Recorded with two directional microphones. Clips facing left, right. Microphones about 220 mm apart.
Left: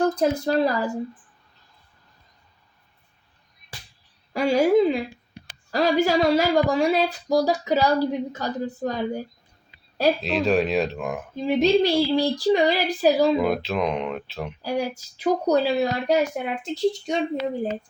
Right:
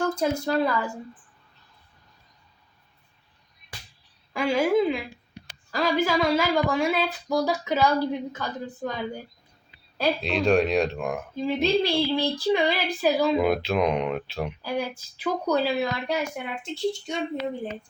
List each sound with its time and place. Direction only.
0.0 s speech: 35° left (ahead or behind)
4.4 s a woman's voice: 40° left (ahead or behind)
10.2 s speech: 5° left (ahead or behind)
11.4 s speech: 40° left (ahead or behind)
13.3 s speech: centre (ahead or behind)
14.6 s speech: 40° left (ahead or behind)